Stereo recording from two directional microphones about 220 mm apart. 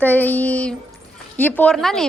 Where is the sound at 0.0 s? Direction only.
10° left (ahead or behind).